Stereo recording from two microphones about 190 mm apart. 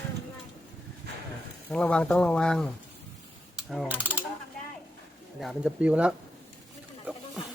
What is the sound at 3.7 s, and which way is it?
Mechanisms, centre (ahead or behind).